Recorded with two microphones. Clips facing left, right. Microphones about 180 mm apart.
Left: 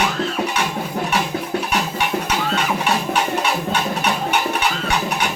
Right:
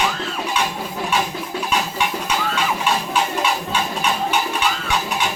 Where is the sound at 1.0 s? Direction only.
60° left (ahead or behind).